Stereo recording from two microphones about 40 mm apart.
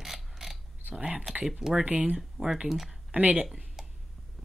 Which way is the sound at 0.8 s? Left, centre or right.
Right.